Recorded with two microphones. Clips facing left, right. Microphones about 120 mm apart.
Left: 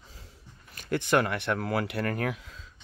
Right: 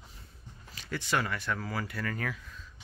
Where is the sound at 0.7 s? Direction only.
55° left (ahead or behind).